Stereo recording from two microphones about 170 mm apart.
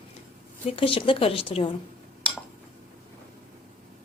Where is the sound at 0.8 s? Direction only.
30° left (ahead or behind).